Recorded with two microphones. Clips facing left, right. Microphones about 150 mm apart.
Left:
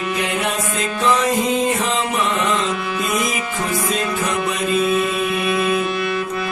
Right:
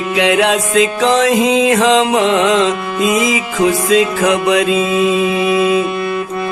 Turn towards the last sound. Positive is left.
turn(degrees=-20)  # may be behind; listen again after turning